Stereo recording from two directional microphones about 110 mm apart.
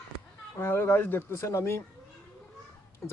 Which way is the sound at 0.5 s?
20° left (ahead or behind).